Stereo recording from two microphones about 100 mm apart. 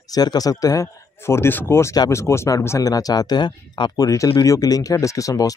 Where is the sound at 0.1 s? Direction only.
40° left (ahead or behind).